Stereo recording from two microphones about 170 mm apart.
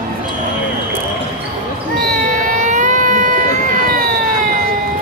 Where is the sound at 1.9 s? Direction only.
55° right (ahead or behind).